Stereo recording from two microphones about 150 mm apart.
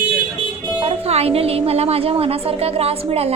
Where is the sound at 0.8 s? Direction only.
40° right (ahead or behind).